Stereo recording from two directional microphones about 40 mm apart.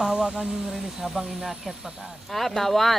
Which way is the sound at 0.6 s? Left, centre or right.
Centre.